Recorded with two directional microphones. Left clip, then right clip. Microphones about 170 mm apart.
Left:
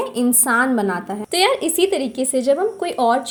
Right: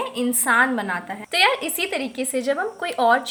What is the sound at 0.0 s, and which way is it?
Speech, 30° left (ahead or behind).